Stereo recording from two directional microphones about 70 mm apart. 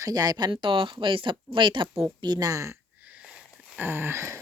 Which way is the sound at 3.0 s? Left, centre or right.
Centre.